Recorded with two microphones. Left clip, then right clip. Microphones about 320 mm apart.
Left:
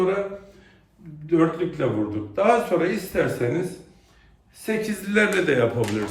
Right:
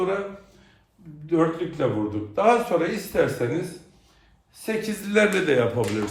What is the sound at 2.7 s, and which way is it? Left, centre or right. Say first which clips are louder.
Speech: even; centre.